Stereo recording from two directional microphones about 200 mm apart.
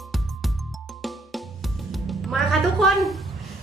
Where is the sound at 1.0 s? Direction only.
Centre (ahead or behind).